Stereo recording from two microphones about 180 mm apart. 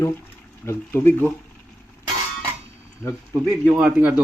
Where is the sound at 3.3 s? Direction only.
10° right (ahead or behind).